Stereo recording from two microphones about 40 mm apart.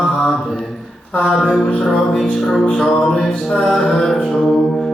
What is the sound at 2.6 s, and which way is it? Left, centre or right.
A man's voice, centre.